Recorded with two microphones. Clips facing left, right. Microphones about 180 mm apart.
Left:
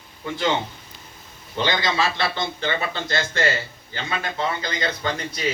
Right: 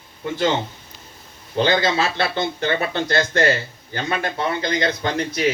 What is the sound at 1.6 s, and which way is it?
Speech, 55° right (ahead or behind).